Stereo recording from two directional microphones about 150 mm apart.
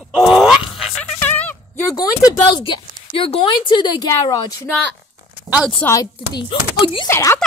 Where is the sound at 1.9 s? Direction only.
25° left (ahead or behind).